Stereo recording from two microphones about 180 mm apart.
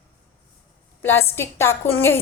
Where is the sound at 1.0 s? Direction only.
15° left (ahead or behind).